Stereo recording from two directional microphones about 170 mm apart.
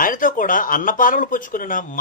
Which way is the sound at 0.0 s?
50° left (ahead or behind).